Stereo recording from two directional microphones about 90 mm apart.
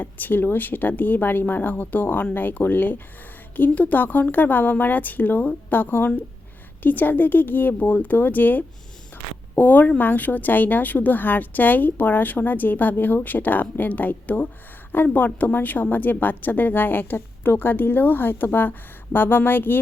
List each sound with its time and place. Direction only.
0.0 s a woman's voice: 20° left (ahead or behind)